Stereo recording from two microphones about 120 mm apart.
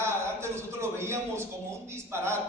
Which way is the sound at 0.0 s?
20° right (ahead or behind).